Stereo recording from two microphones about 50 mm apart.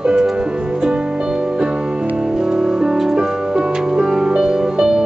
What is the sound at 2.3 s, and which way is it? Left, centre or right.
Music, centre.